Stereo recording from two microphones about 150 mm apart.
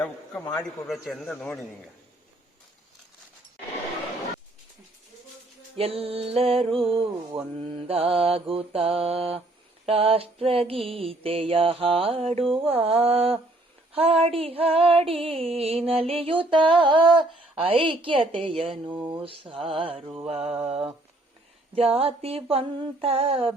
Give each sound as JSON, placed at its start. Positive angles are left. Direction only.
{"t": 0.6, "sound": "a man's voice", "side_deg": 0}
{"t": 5.7, "sound": "music", "side_deg": -40}
{"t": 18.9, "sound": "a sound", "side_deg": -10}
{"t": 19.2, "sound": "music", "side_deg": -35}
{"t": 20.4, "sound": "a sound", "side_deg": -5}
{"t": 21.8, "sound": "music", "side_deg": -40}